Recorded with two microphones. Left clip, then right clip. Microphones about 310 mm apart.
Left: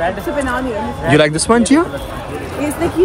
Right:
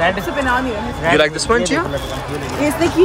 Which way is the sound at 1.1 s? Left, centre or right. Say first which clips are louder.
Left 2 dB; centre.